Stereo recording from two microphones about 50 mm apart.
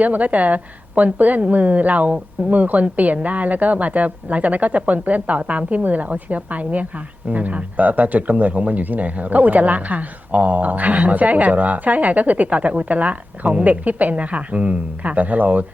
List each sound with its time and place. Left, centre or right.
0.0 s a woman's voice: right